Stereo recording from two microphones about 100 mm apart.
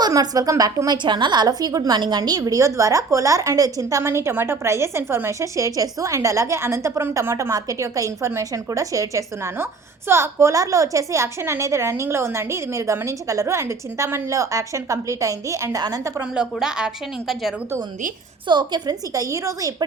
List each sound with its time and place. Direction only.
0.0 s a woman's voice: 40° right (ahead or behind)
0.9 s a woman's voice: 50° right (ahead or behind)
16.2 s speech: 10° right (ahead or behind)
18.4 s a woman's voice: 50° right (ahead or behind); by 19.7 s 30° right (ahead or behind)